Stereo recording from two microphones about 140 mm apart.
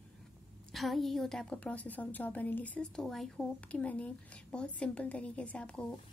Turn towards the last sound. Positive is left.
turn(degrees=5)  # may be behind; listen again after turning